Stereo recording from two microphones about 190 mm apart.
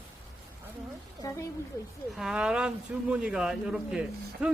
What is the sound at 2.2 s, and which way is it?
A man's voice, 5° right (ahead or behind).